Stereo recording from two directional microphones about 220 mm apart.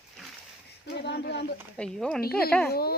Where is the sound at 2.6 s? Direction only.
45° left (ahead or behind).